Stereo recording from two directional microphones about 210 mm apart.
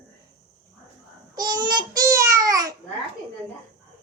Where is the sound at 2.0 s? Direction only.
15° right (ahead or behind).